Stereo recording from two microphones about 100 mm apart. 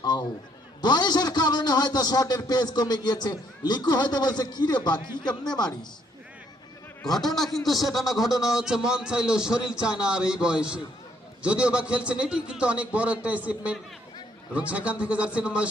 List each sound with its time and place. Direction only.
0.0 s a sound: 40° left (ahead or behind)
0.8 s a man's voice: 45° left (ahead or behind)
7.0 s a man's voice: 5° left (ahead or behind)